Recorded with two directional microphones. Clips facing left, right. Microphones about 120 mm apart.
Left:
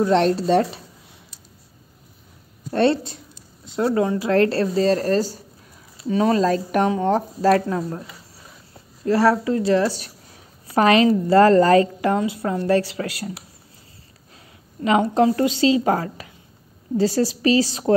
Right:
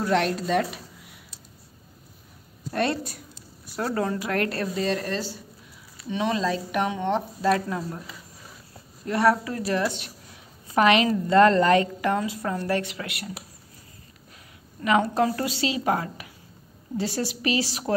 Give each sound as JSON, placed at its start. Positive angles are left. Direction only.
{"t": 0.0, "sound": "speech", "side_deg": 30}
{"t": 2.7, "sound": "a woman's voice", "side_deg": 30}
{"t": 9.0, "sound": "a woman's voice", "side_deg": 30}
{"t": 14.8, "sound": "a woman's voice", "side_deg": 25}